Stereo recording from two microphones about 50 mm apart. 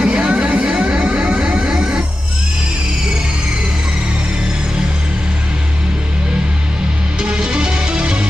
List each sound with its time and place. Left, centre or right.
0.0 s vehicle: centre
7.2 s music: centre